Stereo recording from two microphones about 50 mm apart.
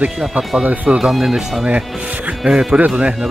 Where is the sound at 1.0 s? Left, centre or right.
Centre.